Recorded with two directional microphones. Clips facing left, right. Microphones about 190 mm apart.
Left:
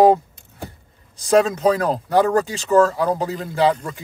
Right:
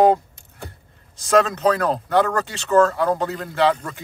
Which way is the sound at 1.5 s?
5° left (ahead or behind).